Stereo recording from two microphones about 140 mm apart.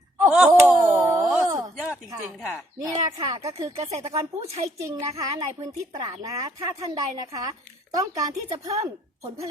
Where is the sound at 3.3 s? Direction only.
45° right (ahead or behind).